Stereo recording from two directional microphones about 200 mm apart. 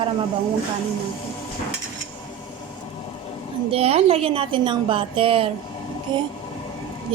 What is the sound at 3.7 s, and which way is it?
A woman's voice, 30° right (ahead or behind).